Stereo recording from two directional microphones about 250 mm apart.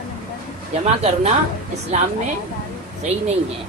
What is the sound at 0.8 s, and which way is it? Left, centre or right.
A woman's voice, right.